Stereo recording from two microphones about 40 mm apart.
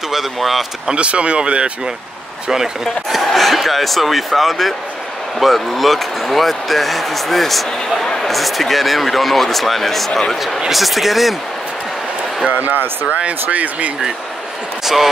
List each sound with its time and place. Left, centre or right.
0.1 s speech: centre
0.8 s speech: right
2.4 s speech: centre
2.8 s speech: centre
12.4 s speech: right